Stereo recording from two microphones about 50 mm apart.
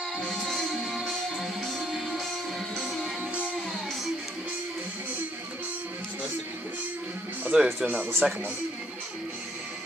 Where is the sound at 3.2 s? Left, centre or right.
Right.